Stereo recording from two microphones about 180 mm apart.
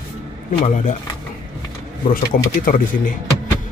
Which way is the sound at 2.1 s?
50° left (ahead or behind).